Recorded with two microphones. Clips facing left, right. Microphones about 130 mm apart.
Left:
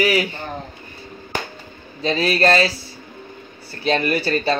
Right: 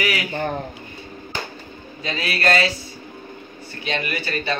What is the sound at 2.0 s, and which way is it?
Speech, 30° left (ahead or behind).